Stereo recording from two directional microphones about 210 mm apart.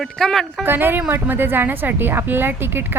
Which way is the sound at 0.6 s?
10° right (ahead or behind).